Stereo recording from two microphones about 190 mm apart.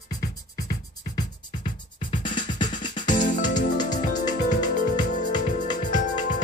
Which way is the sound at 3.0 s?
40° left (ahead or behind).